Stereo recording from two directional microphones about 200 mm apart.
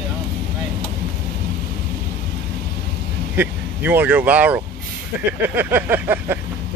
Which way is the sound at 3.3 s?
10° right (ahead or behind).